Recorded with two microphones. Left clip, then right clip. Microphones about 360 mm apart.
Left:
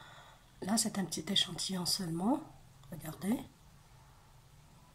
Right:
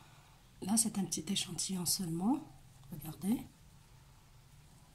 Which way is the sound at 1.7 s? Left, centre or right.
Centre.